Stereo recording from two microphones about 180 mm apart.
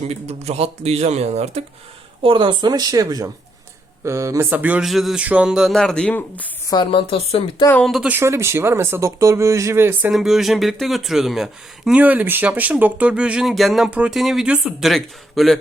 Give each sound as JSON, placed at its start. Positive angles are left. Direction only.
{"t": 0.1, "sound": "speech", "side_deg": -35}
{"t": 6.7, "sound": "speech", "side_deg": 25}
{"t": 7.7, "sound": "speech", "side_deg": 5}
{"t": 10.1, "sound": "speech", "side_deg": 0}